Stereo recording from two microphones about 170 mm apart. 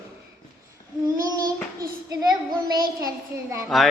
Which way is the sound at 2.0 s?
25° right (ahead or behind).